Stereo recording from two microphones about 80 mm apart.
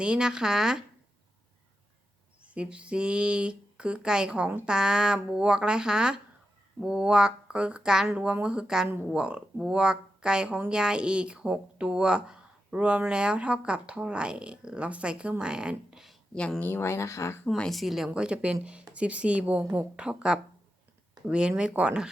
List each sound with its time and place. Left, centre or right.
0.0 s speech: centre
2.4 s speech: centre
16.6 s speech: left
17.6 s speech: centre